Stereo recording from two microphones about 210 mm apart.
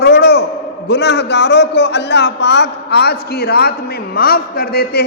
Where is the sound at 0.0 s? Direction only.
50° left (ahead or behind).